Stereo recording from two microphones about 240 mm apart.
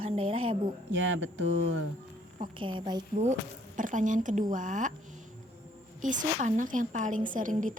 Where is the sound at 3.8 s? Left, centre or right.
Right.